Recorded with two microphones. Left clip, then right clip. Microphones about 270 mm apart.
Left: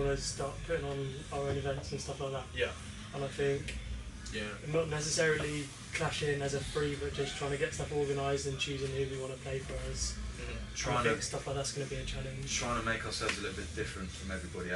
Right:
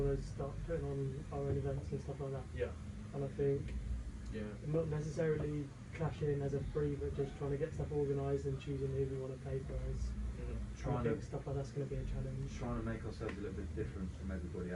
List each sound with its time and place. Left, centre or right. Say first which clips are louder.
0.0 s speech: left 5 dB; centre
10.8 s speech: left 8 dB; centre